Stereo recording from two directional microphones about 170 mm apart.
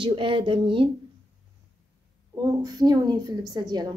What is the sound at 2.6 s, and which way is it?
A woman's voice, 25° right (ahead or behind).